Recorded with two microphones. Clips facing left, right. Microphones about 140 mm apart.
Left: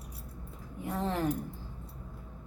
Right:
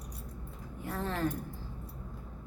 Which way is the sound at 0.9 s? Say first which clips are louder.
Left 2 dB; 20° left (ahead or behind).